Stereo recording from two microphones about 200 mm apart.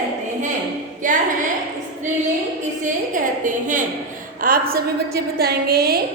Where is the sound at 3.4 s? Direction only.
40° right (ahead or behind).